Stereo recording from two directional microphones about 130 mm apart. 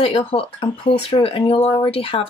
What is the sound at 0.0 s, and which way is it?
Speech, 45° left (ahead or behind).